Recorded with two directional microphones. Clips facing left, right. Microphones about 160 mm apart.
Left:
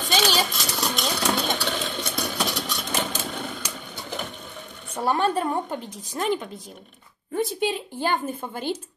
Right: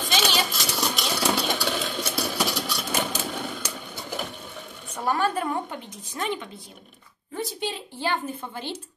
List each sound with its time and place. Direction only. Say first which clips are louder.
0.0 s a sound: left 2 dB; centre (ahead or behind)
0.5 s engine: even; centre (ahead or behind)
3.7 s sewing machine: even; 5° right (ahead or behind)
4.9 s a woman's voice: left 2 dB; 30° left (ahead or behind)
7.6 s speech: left 4 dB; 50° left (ahead or behind)